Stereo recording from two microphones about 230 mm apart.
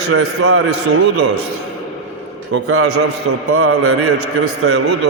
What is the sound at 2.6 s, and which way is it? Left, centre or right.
A man's voice, right.